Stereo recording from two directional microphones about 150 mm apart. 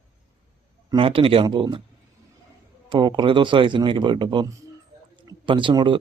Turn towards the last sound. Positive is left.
turn(degrees=-30)  # may be behind; listen again after turning